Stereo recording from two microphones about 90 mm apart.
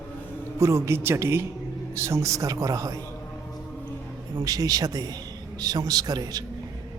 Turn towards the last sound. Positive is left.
turn(degrees=-45)  # may be behind; listen again after turning